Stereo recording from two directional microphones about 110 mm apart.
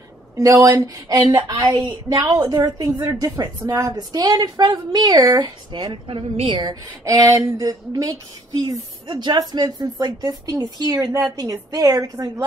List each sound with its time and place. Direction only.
0.4 s a woman's voice: 30° right (ahead or behind)